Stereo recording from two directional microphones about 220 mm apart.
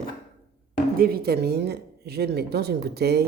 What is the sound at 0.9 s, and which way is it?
A woman's voice, 45° right (ahead or behind).